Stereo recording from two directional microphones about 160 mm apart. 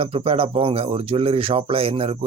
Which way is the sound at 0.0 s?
35° right (ahead or behind).